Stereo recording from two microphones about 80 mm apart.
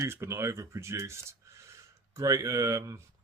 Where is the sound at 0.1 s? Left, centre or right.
Right.